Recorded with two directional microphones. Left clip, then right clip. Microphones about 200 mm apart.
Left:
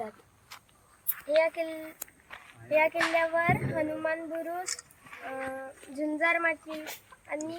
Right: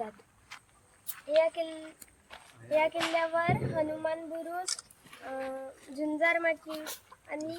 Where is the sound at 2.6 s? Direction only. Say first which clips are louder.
Left 3 dB; 5° right (ahead or behind).